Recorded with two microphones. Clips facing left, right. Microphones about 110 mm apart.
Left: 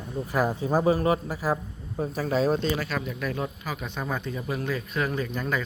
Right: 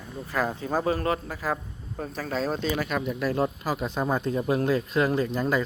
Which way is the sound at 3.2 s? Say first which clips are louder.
Right 5 dB; 30° right (ahead or behind).